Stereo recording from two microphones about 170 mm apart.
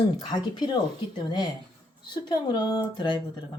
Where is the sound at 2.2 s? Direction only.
25° left (ahead or behind).